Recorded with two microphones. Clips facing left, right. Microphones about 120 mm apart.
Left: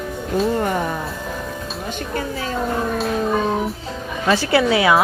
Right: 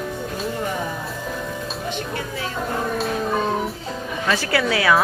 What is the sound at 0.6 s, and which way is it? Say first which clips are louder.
Music: left 5 dB; 60° left (ahead or behind).